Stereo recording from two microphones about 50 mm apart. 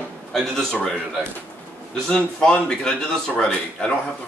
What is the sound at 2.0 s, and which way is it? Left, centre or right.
A man's voice, centre.